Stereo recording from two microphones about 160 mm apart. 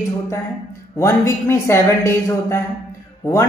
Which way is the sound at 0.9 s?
15° left (ahead or behind).